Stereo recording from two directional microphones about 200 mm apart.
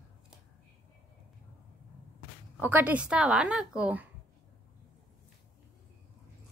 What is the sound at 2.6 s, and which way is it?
A woman's voice, 10° right (ahead or behind).